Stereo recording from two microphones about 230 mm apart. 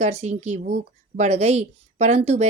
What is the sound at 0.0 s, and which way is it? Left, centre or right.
A woman's voice, right.